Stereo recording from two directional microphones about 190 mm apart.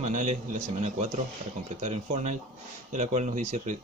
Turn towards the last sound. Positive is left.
turn(degrees=-40)  # may be behind; listen again after turning